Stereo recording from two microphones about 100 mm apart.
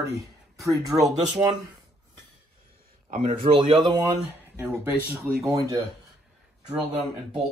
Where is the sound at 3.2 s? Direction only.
70° right (ahead or behind).